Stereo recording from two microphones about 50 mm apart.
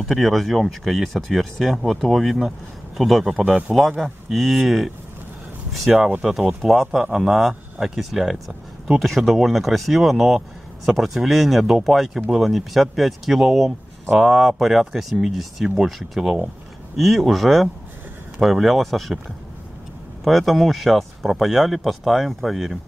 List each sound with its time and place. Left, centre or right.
0.0 s speech: centre
5.9 s speech: right
6.6 s speech: centre
20.2 s speech: centre